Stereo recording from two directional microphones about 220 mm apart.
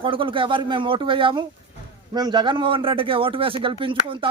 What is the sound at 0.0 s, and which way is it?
Speech, 25° right (ahead or behind).